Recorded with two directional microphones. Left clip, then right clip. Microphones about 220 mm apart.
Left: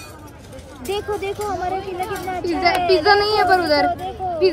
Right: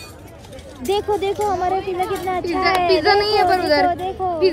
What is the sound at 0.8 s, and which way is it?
Speech, 45° right (ahead or behind).